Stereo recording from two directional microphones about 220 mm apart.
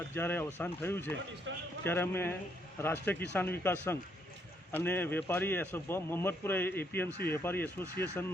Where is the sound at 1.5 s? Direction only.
60° right (ahead or behind).